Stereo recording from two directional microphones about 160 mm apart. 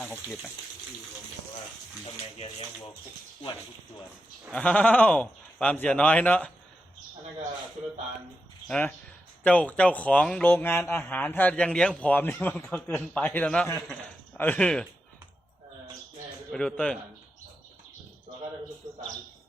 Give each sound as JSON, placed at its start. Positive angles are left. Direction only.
{"t": 0.0, "sound": "speech", "side_deg": 10}
{"t": 4.5, "sound": "speech", "side_deg": 10}
{"t": 8.6, "sound": "speech", "side_deg": 5}
{"t": 16.5, "sound": "a man's voice", "side_deg": 5}
{"t": 18.8, "sound": "a sound", "side_deg": -30}